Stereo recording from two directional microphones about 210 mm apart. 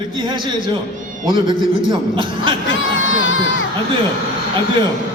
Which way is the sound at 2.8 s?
70° left (ahead or behind).